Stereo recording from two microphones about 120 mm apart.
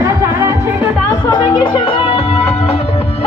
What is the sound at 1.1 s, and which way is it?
Music, 40° left (ahead or behind).